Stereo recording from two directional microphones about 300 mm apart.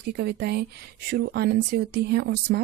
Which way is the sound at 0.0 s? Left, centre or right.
Right.